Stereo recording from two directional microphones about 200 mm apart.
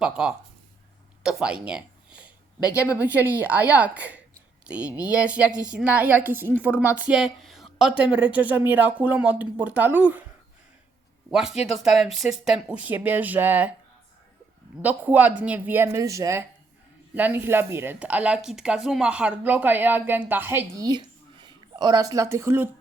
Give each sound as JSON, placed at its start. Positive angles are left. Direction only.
{"t": 0.0, "sound": "speech", "side_deg": -5}
{"t": 2.6, "sound": "speech", "side_deg": 15}
{"t": 3.0, "sound": "speech", "side_deg": -10}
{"t": 11.3, "sound": "speech", "side_deg": 0}
{"t": 14.8, "sound": "speech", "side_deg": -10}